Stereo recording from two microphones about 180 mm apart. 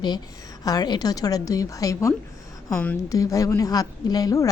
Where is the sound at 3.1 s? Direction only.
20° left (ahead or behind).